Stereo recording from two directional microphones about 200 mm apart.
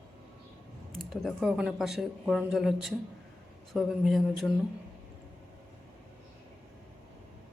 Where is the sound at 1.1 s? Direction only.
Centre (ahead or behind).